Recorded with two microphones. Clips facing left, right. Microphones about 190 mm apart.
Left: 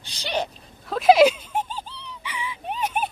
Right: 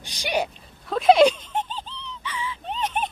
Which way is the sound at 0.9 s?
Centre (ahead or behind).